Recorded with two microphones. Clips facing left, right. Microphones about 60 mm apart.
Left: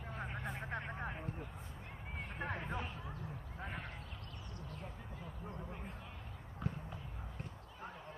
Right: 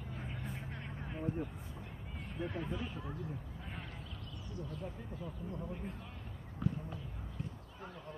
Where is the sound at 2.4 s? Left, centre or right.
Left.